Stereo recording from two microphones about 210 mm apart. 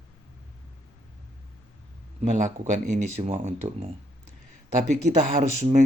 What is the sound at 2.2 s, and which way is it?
Speech, 35° right (ahead or behind).